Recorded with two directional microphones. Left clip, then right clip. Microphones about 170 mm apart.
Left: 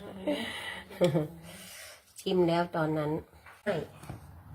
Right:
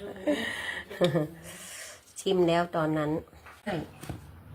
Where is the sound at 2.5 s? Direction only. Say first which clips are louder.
Right 3 dB; 15° right (ahead or behind).